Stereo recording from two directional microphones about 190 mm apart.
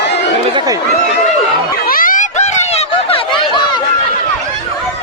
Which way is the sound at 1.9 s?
45° left (ahead or behind).